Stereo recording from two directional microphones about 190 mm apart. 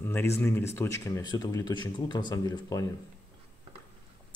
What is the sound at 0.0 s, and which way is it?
Speech, 10° left (ahead or behind).